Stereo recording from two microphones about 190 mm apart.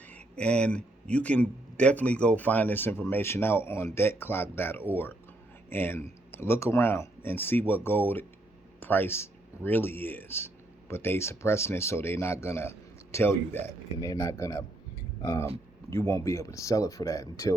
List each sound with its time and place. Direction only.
0.0 s speech: 5° left (ahead or behind)